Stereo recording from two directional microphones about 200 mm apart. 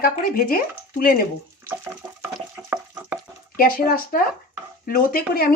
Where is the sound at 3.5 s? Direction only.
45° left (ahead or behind).